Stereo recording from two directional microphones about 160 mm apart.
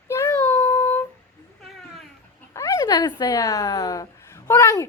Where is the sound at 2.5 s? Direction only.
20° left (ahead or behind).